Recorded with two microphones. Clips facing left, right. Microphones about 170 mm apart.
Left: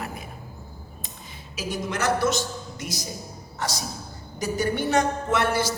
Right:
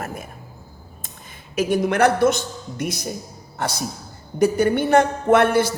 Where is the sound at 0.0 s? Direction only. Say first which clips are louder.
Right 4 dB; 45° right (ahead or behind).